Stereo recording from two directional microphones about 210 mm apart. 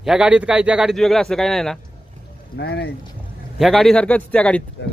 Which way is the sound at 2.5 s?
50° left (ahead or behind).